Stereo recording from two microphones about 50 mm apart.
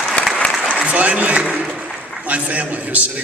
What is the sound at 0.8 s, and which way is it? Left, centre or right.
Applause, right.